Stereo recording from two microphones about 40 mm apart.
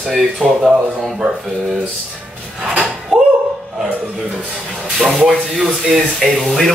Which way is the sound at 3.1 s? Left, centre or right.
Centre.